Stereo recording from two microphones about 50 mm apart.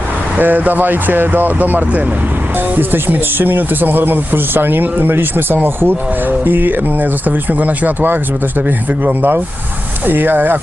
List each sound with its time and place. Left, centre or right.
0.3 s speech: right
10.1 s speech: right